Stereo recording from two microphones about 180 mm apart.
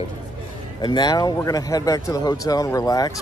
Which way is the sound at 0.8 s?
25° left (ahead or behind).